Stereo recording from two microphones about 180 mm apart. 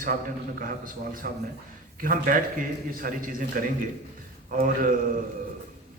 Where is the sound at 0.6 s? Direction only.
50° right (ahead or behind).